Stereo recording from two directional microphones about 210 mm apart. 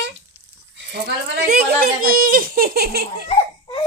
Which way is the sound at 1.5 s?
45° right (ahead or behind).